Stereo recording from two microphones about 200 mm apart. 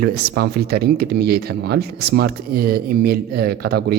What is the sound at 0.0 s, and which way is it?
Speech, 50° right (ahead or behind).